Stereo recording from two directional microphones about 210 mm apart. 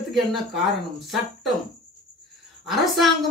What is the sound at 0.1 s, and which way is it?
Speech, centre (ahead or behind).